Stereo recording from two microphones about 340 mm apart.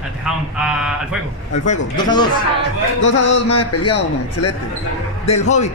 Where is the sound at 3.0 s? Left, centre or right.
Left.